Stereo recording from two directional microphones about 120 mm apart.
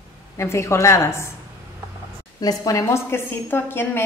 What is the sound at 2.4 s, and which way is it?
A woman's voice, 30° left (ahead or behind).